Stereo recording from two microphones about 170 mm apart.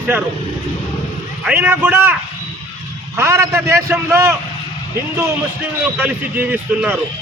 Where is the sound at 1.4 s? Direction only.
10° right (ahead or behind).